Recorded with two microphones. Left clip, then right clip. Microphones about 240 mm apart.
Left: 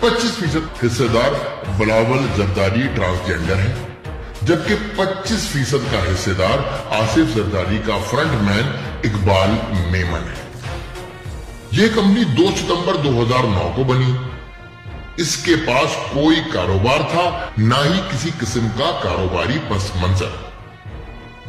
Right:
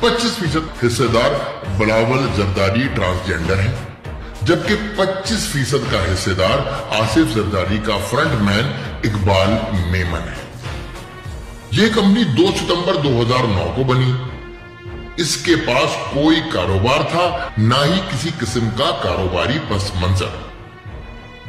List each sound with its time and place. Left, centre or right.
0.0 s a man's voice: centre
11.7 s a man's voice: centre
15.1 s a man's voice: centre